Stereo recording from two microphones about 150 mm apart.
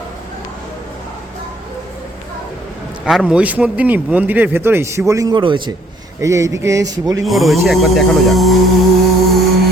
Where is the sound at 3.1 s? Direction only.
5° right (ahead or behind); by 5.7 s 35° right (ahead or behind).